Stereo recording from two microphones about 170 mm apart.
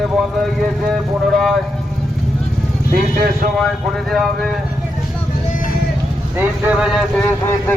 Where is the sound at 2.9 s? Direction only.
55° right (ahead or behind).